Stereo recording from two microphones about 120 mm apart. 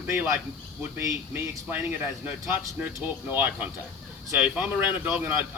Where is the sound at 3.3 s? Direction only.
15° right (ahead or behind).